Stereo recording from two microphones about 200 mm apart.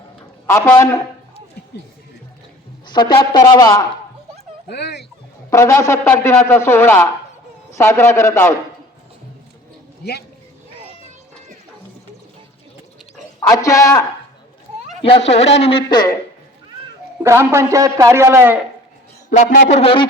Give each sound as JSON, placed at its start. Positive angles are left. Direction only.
{"t": 0.4, "sound": "speech", "side_deg": 15}
{"t": 2.8, "sound": "speech", "side_deg": 20}
{"t": 4.7, "sound": "speech", "side_deg": 55}
{"t": 5.5, "sound": "speech", "side_deg": 15}
{"t": 10.0, "sound": "speech", "side_deg": 55}
{"t": 13.5, "sound": "speech", "side_deg": 15}
{"t": 15.0, "sound": "speech", "side_deg": 30}
{"t": 17.2, "sound": "a man's voice", "side_deg": -15}
{"t": 19.3, "sound": "speech", "side_deg": 40}